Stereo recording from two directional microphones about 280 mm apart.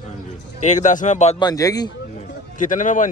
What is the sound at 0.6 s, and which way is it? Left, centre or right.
Speech, left.